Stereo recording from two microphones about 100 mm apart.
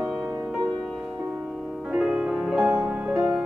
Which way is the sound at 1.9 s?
5° right (ahead or behind).